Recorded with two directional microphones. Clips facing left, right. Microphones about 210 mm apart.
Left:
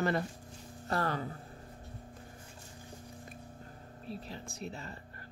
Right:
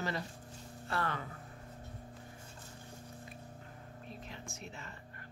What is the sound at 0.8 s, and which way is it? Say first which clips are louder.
Speech: left 4 dB; 40° left (ahead or behind).